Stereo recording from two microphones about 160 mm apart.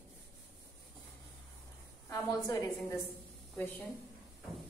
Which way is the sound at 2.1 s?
20° left (ahead or behind).